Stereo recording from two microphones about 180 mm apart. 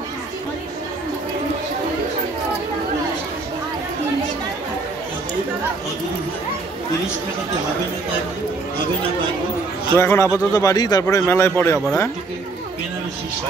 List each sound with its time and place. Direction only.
9.9 s a man's voice: 15° left (ahead or behind)